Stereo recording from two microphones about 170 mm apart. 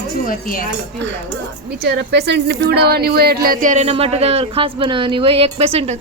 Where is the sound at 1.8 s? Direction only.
80° right.